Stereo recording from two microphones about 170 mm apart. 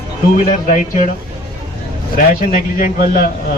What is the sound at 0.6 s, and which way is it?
Speech, 50° left (ahead or behind).